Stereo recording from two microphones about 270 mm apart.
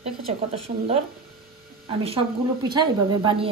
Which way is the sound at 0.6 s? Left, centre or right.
Right.